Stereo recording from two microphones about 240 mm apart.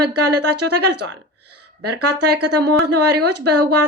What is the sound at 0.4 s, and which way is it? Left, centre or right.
Speech, right.